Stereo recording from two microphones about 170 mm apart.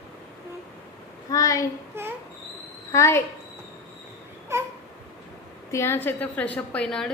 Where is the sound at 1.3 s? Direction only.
20° left (ahead or behind).